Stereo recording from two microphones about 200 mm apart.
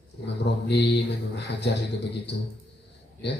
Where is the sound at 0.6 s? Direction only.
60° left (ahead or behind).